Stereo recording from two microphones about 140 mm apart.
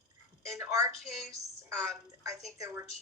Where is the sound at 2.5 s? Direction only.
20° right (ahead or behind).